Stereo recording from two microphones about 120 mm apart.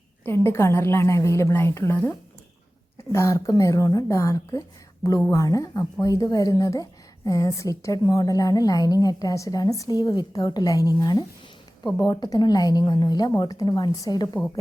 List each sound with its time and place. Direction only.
0.3 s a woman's voice: 20° left (ahead or behind)
11.8 s speech: centre (ahead or behind)
12.0 s a woman's voice: 35° left (ahead or behind)